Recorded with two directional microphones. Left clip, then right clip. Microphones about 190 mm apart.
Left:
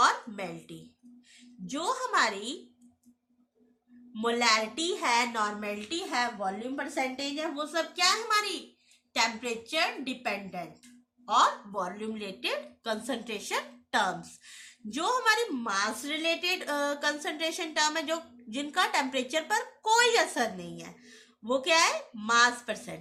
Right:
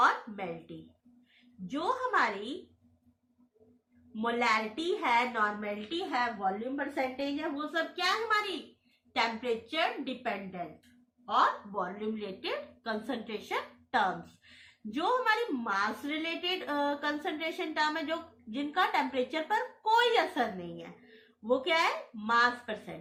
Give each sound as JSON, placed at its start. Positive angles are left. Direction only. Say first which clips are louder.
{"t": 1.7, "sound": "a woman's voice", "louder": "left 1 dB", "side_deg": 40}
{"t": 4.1, "sound": "a woman's voice", "louder": "left 3 dB", "side_deg": 40}